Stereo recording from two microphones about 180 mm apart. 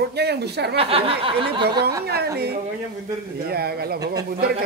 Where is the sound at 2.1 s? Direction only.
60° right (ahead or behind).